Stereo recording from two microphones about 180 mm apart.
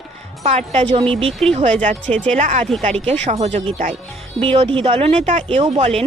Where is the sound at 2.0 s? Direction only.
5° left (ahead or behind).